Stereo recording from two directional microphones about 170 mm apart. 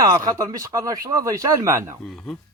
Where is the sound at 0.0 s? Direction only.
20° right (ahead or behind).